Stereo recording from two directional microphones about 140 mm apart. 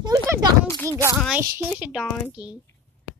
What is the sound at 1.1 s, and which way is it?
Speech, 5° right (ahead or behind).